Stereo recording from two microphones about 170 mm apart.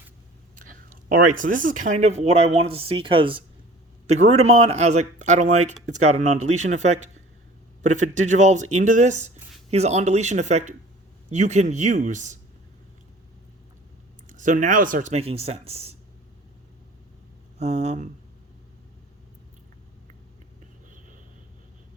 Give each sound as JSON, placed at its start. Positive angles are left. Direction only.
{"t": 1.1, "sound": "speech", "side_deg": -50}
{"t": 4.0, "sound": "speech", "side_deg": -40}
{"t": 14.3, "sound": "speech", "side_deg": -45}
{"t": 17.6, "sound": "speech", "side_deg": -40}